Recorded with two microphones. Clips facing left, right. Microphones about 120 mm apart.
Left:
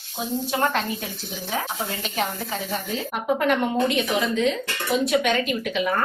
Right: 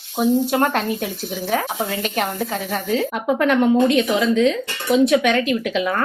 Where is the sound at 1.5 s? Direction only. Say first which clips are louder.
Right 6 dB; 65° right (ahead or behind).